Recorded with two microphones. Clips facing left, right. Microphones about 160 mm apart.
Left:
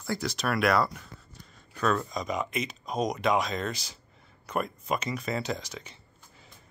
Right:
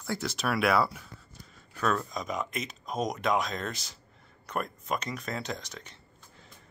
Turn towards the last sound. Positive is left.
turn(degrees=0)  # may be behind; listen again after turning